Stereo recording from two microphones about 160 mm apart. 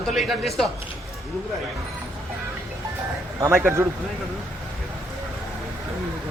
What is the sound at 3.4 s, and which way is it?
Speech, 15° right (ahead or behind).